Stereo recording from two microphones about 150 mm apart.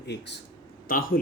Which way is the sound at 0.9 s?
70° left (ahead or behind).